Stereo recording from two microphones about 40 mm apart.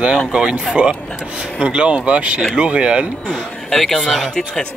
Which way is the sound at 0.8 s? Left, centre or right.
Right.